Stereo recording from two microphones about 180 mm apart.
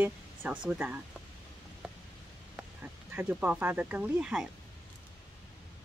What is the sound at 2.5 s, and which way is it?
Speech, 5° right (ahead or behind).